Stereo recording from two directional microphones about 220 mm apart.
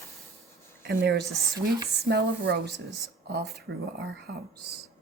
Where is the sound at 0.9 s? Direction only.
50° right (ahead or behind).